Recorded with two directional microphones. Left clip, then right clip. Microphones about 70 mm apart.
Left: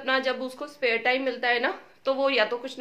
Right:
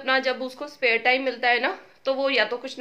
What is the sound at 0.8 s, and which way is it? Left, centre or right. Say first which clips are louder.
Speech: right 3 dB; right.